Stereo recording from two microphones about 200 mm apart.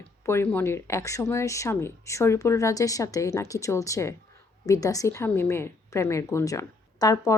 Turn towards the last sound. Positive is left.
turn(degrees=15)  # may be behind; listen again after turning